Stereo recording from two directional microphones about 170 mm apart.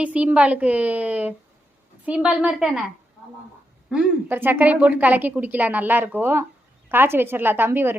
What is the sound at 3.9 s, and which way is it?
A woman's voice, 10° right (ahead or behind).